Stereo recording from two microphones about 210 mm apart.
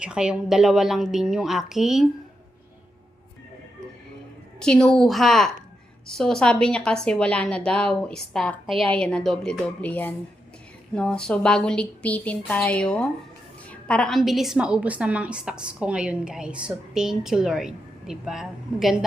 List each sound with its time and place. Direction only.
0.0 s a woman's voice: 5° right (ahead or behind)
4.6 s a woman's voice: 5° left (ahead or behind)